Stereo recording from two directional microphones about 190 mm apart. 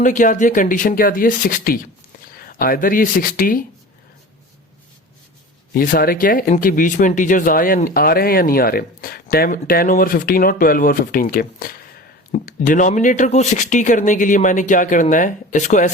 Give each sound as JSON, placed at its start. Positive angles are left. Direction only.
{"t": 0.0, "sound": "speech", "side_deg": 40}
{"t": 5.7, "sound": "speech", "side_deg": 45}